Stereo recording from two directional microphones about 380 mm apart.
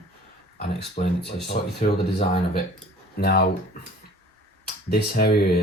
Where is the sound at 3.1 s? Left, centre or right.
Left.